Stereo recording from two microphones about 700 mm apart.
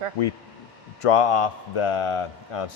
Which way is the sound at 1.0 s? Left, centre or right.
Left.